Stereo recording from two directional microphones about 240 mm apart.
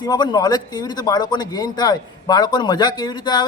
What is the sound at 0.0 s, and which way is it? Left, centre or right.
A man's voice, centre.